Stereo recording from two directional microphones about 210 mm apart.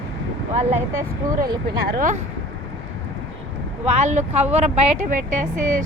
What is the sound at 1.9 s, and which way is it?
Speech, 40° right (ahead or behind).